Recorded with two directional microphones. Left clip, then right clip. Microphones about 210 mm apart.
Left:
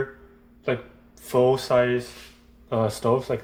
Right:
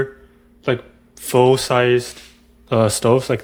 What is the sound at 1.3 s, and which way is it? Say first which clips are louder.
Speech: right 5 dB; 45° right (ahead or behind).